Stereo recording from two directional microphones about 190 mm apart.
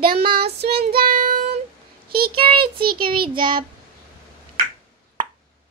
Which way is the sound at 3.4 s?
25° right (ahead or behind).